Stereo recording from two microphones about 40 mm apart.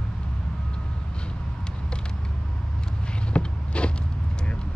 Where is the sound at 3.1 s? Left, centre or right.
Left.